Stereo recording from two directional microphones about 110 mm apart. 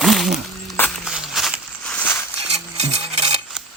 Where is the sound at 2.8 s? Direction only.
80° right.